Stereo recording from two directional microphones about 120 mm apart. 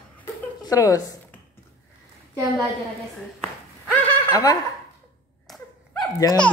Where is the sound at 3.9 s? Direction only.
15° left (ahead or behind).